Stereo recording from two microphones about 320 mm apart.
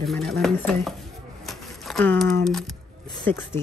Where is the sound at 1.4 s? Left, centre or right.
Centre.